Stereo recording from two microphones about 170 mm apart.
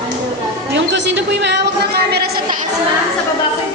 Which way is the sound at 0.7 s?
90° right.